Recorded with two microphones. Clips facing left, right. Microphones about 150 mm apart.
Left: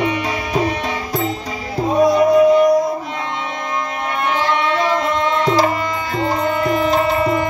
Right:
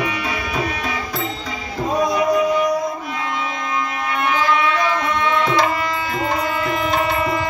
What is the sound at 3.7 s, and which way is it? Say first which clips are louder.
Music: left 1 dB; 30° left (ahead or behind).